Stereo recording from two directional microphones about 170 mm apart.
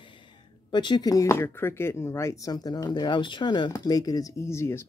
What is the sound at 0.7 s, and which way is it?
Speech, 25° left (ahead or behind).